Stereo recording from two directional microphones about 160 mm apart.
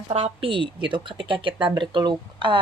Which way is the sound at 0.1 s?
40° right (ahead or behind).